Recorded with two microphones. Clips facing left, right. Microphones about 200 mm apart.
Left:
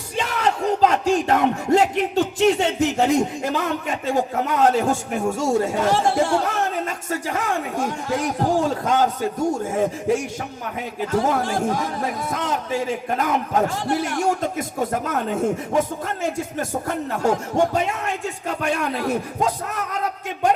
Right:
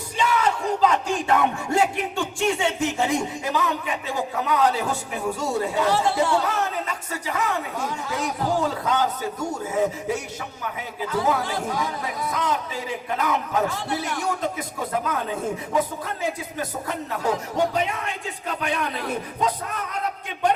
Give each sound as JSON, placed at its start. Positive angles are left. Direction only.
{"t": 0.2, "sound": "speech", "side_deg": 45}
{"t": 11.0, "sound": "speech", "side_deg": 45}